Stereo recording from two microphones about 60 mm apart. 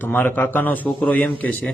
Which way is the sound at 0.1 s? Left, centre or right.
Left.